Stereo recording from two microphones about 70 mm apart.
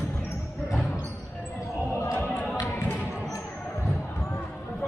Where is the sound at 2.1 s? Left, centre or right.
Left.